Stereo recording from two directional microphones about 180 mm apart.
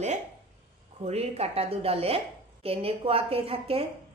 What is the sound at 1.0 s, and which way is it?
A woman's voice, 35° right (ahead or behind).